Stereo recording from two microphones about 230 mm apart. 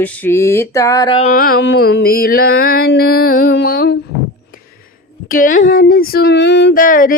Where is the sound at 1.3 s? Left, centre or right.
Left.